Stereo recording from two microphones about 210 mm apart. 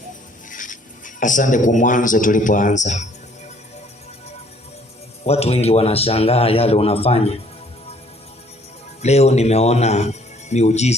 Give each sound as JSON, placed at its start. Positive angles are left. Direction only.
{"t": 0.5, "sound": "speech", "side_deg": 40}
{"t": 5.2, "sound": "a man's voice", "side_deg": 30}
{"t": 9.0, "sound": "speech", "side_deg": 30}